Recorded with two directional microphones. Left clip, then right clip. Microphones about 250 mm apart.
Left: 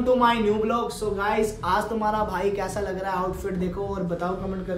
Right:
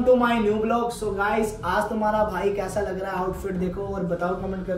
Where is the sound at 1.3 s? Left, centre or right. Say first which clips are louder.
Left 3 dB; centre.